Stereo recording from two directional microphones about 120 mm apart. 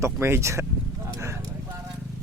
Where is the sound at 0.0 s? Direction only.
20° right (ahead or behind).